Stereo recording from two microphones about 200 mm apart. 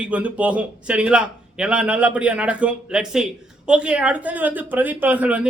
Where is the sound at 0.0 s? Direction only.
5° right (ahead or behind).